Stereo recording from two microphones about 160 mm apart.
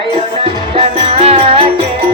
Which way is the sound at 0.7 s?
40° right (ahead or behind).